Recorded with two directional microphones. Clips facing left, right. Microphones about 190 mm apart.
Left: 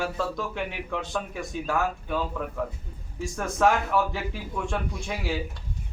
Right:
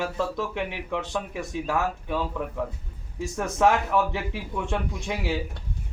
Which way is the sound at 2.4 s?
15° right (ahead or behind).